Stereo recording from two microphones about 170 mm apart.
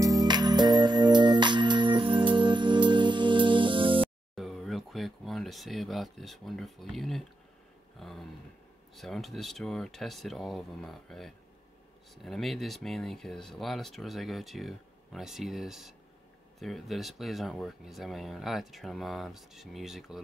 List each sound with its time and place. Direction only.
0.0 s music: 20° right (ahead or behind)
4.4 s a sound: centre (ahead or behind)
8.0 s speech: centre (ahead or behind)